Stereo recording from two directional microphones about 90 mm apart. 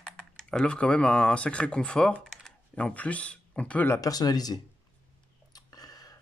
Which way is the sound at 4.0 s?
45° left (ahead or behind).